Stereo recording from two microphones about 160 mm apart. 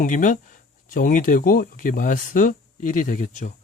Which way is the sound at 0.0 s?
55° left (ahead or behind).